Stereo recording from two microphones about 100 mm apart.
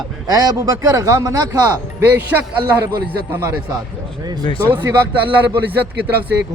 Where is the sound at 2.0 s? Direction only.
15° right (ahead or behind).